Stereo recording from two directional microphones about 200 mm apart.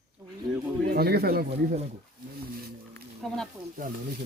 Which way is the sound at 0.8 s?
50° right (ahead or behind).